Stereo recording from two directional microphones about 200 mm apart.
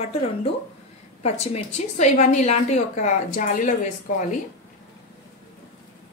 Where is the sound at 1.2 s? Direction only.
35° left (ahead or behind).